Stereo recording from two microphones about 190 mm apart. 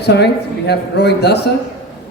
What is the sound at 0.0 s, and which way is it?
A man's voice, 60° left (ahead or behind).